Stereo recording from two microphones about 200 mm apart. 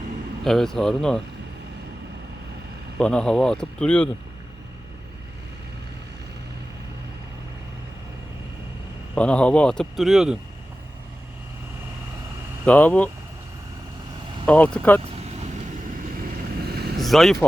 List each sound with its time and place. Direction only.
0.4 s speech: centre (ahead or behind)
3.0 s speech: 5° left (ahead or behind)
9.1 s speech: 5° left (ahead or behind)
12.6 s speech: 5° left (ahead or behind)
14.4 s speech: 5° left (ahead or behind)
15.1 s vehicle: 35° right (ahead or behind)
16.6 s vehicle: 50° right (ahead or behind)
17.0 s vehicle: centre (ahead or behind)